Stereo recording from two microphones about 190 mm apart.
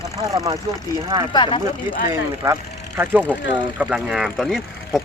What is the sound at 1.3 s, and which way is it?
Speech, 25° left (ahead or behind).